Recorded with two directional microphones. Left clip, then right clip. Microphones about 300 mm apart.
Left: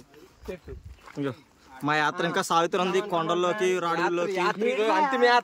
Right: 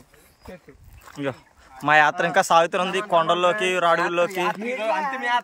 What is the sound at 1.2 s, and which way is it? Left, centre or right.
A man's voice, centre.